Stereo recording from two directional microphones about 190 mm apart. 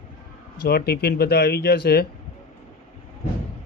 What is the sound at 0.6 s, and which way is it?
Speech, 55° left (ahead or behind).